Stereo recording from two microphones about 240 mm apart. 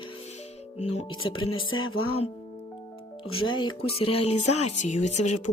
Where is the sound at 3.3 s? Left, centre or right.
Left.